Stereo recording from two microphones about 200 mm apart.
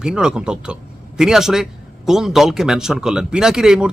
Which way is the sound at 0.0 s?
5° right (ahead or behind).